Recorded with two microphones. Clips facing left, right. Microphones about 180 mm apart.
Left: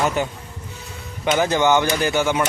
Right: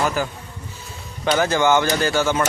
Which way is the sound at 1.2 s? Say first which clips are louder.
Even; 20° left (ahead or behind).